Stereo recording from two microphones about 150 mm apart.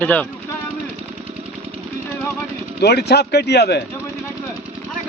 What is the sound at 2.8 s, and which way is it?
Speech, 90° left.